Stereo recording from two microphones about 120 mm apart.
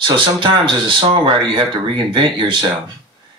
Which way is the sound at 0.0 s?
40° right (ahead or behind).